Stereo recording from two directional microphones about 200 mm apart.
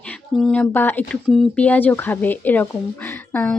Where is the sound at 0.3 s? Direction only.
5° left (ahead or behind).